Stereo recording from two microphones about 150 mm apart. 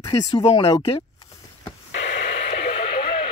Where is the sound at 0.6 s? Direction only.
40° left (ahead or behind).